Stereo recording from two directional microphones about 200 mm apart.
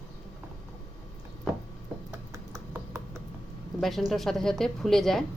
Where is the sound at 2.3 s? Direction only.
15° right (ahead or behind).